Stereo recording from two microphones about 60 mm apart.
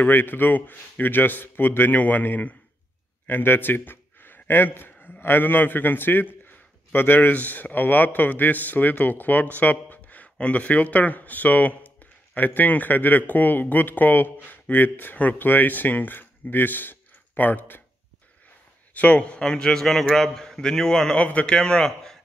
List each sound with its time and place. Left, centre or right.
0.0 s a man's voice: left
18.9 s a man's voice: left
21.2 s a man's voice: left
21.5 s speech: centre